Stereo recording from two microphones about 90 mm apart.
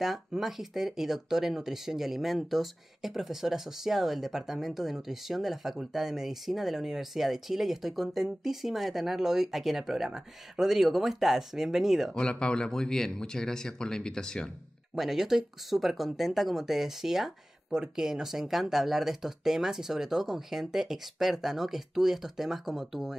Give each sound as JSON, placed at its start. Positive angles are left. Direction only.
{"t": 0.0, "sound": "speech", "side_deg": -5}
{"t": 12.1, "sound": "speech", "side_deg": 10}
{"t": 15.0, "sound": "speech", "side_deg": -5}